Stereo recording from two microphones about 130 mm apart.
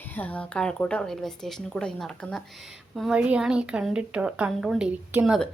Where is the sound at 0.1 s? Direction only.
10° left (ahead or behind); by 5.5 s 5° right (ahead or behind).